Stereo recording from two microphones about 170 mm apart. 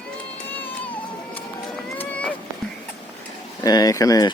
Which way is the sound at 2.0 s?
10° left (ahead or behind).